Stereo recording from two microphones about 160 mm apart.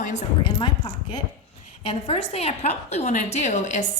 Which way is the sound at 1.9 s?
40° left (ahead or behind).